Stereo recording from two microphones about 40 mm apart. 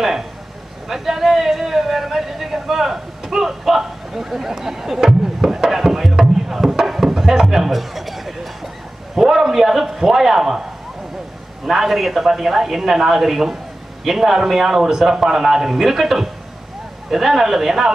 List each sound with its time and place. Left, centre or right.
0.8 s speech: centre
7.4 s a sound: centre
9.1 s a man's voice: centre
11.6 s a man's voice: centre